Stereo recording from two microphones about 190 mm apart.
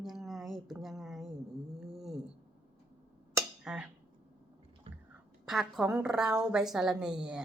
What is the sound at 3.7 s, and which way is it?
Speech, 5° right (ahead or behind).